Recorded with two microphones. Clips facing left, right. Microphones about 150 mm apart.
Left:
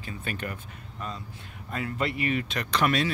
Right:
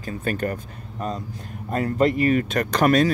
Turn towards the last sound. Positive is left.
turn(degrees=-45)  # may be behind; listen again after turning